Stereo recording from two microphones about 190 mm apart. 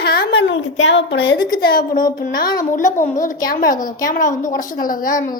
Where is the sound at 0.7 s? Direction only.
75° left (ahead or behind).